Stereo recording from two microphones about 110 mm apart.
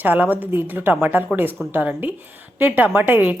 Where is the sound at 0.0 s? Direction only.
15° right (ahead or behind).